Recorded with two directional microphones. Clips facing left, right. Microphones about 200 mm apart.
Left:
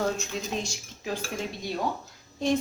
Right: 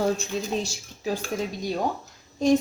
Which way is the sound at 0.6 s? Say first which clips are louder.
Right 5 dB; 35° right (ahead or behind).